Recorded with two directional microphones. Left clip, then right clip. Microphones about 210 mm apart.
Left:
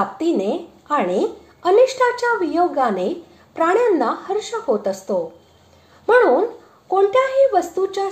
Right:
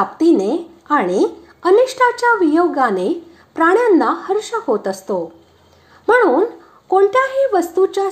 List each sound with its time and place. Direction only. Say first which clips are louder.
0.2 s a woman's voice: right 6 dB; 30° right (ahead or behind)